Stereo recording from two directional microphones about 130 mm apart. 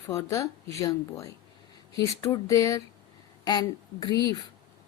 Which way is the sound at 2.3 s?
25° left (ahead or behind).